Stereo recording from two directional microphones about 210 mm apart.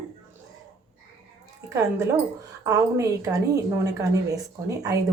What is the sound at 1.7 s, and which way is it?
A woman's voice, 15° right (ahead or behind).